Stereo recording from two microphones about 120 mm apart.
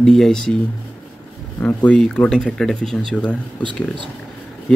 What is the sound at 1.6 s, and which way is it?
Speech, 10° left (ahead or behind).